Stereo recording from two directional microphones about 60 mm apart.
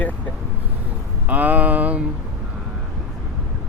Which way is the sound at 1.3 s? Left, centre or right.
Right.